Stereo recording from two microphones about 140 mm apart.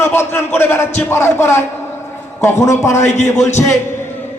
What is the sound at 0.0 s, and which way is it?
A man's voice, 15° left (ahead or behind).